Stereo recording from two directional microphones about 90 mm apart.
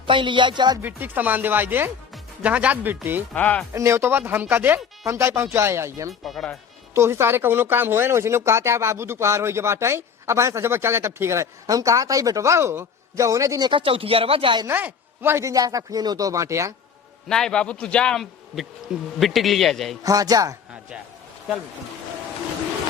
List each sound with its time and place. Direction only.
0.0 s speech: 65° right (ahead or behind)
0.8 s speech: 20° right (ahead or behind)
3.3 s a man's voice: 15° left (ahead or behind)
3.7 s speech: 30° right (ahead or behind)
6.2 s a man's voice: 5° left (ahead or behind)
6.9 s speech: 30° right (ahead or behind)
13.6 s speech: 65° right (ahead or behind)
14.7 s speech: 20° right (ahead or behind)
17.2 s a man's voice: 5° left (ahead or behind)
20.0 s speech: 40° right (ahead or behind)